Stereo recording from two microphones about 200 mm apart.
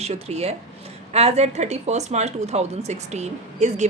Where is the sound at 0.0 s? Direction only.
30° right (ahead or behind).